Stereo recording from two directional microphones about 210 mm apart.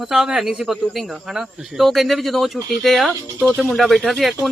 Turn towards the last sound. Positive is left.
turn(degrees=0)  # may be behind; listen again after turning